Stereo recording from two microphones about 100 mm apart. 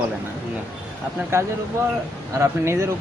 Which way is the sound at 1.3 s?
25° right (ahead or behind).